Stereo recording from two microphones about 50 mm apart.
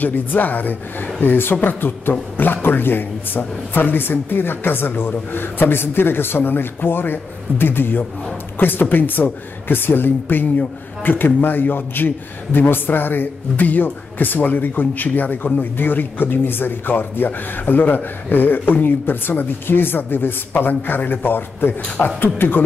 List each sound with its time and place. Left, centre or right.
0.0 s a man's voice: left